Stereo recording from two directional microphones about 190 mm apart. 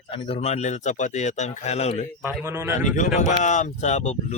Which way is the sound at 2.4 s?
10° right (ahead or behind).